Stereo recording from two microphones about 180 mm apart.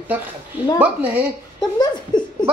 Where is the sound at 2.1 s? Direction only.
25° left (ahead or behind).